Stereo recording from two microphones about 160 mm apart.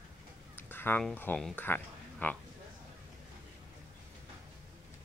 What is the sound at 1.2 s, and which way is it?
Speech, 10° left (ahead or behind).